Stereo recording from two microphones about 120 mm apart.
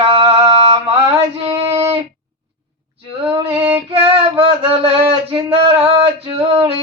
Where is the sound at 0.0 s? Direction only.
50° right (ahead or behind).